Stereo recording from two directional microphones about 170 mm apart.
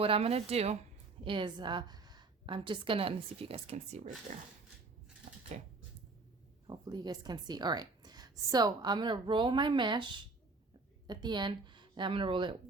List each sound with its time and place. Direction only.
0.0 s a woman's voice: 35° right (ahead or behind)
5.5 s speech: 40° right (ahead or behind)
6.7 s a woman's voice: 25° right (ahead or behind)